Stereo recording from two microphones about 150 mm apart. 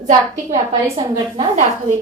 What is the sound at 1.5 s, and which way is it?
Speech, 55° right (ahead or behind).